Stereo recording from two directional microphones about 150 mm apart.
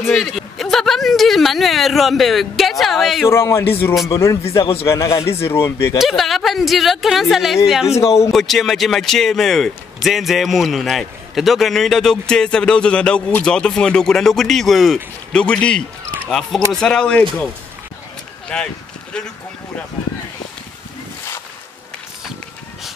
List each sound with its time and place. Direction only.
0.1 s a sound: centre (ahead or behind)
3.3 s a man's voice: 20° left (ahead or behind)
4.4 s a man's voice: 40° left (ahead or behind)
4.8 s a man's voice: 20° left (ahead or behind)
5.9 s a man's voice: centre (ahead or behind)
18.5 s a man's voice: 5° left (ahead or behind)